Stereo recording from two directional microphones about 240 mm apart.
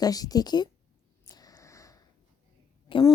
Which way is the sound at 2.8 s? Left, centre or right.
Left.